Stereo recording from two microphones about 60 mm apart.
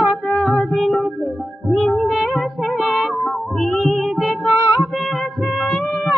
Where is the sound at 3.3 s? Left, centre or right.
Centre.